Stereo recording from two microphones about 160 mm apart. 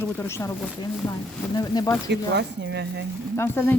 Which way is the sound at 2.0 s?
90° right.